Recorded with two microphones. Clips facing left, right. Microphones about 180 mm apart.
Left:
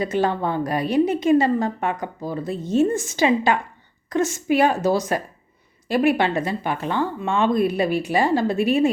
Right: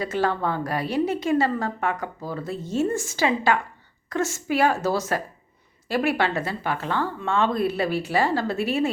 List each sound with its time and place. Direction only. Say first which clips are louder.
0.0 s a woman's voice: left 3 dB; 20° left (ahead or behind)